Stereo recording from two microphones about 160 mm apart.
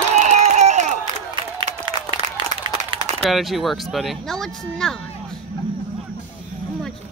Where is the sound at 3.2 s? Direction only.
Centre (ahead or behind).